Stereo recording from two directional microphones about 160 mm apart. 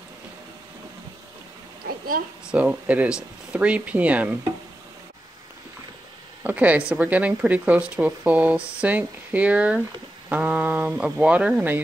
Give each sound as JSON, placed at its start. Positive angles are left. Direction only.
{"t": 2.5, "sound": "speech", "side_deg": -10}
{"t": 6.4, "sound": "speech", "side_deg": -10}